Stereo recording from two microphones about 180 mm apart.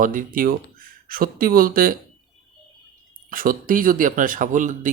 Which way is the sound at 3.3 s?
50° right (ahead or behind).